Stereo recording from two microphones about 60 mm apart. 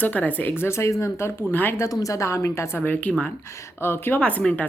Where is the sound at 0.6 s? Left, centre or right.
Left.